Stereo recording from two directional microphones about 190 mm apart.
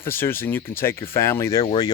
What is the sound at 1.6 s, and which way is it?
Speech, 25° left (ahead or behind).